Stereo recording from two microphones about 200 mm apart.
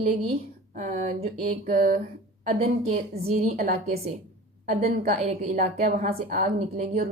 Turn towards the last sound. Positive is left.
turn(degrees=-35)  # may be behind; listen again after turning